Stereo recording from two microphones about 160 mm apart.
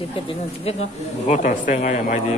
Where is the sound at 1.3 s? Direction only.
50° left (ahead or behind).